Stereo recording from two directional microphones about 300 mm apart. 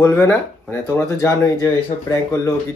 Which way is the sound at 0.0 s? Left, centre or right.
Centre.